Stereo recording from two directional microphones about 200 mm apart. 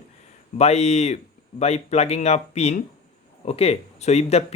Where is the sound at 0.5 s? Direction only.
35° left (ahead or behind).